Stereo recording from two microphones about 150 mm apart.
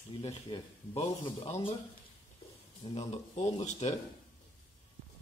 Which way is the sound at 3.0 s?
45° left (ahead or behind).